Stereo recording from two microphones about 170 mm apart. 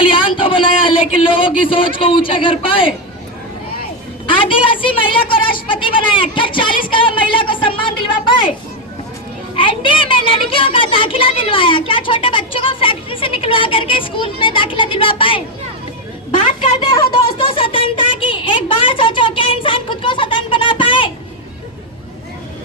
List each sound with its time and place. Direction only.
0.0 s a man's voice: 30° left (ahead or behind)
4.4 s a woman's voice: 30° left (ahead or behind)
9.6 s a woman's voice: 30° left (ahead or behind)
16.8 s speech: 30° left (ahead or behind)